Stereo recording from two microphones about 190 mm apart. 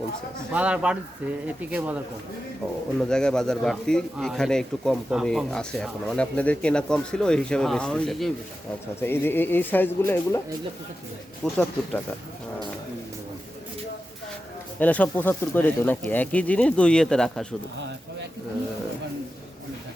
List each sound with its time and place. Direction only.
0.5 s speech: 5° right (ahead or behind)
3.1 s speech: 5° left (ahead or behind)
11.4 s speech: centre (ahead or behind)
14.8 s speech: 10° left (ahead or behind)
17.7 s speech: 70° right (ahead or behind)